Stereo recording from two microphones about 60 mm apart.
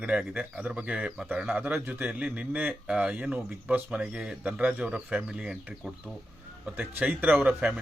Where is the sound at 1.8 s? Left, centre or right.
Right.